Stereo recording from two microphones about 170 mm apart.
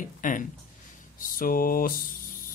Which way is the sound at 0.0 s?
50° left (ahead or behind).